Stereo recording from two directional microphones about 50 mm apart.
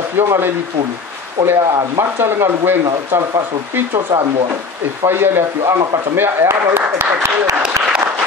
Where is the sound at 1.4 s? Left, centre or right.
Right.